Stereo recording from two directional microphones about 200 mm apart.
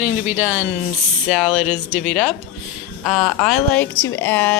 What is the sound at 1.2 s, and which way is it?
Speech, centre (ahead or behind).